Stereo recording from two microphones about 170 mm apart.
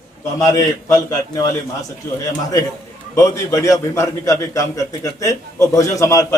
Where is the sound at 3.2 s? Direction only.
20° left (ahead or behind).